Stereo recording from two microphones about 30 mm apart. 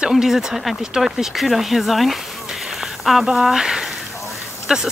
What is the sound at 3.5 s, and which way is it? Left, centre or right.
Speech, right.